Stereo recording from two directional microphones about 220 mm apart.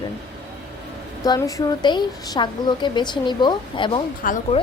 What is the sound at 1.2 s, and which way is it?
A woman's voice, 15° left (ahead or behind).